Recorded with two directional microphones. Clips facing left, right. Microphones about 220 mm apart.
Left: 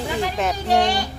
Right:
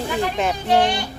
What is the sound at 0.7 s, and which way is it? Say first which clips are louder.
Speech: right 1 dB; 40° left (ahead or behind).